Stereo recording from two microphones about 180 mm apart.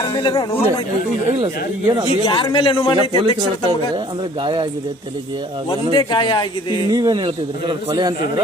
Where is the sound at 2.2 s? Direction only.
25° left (ahead or behind).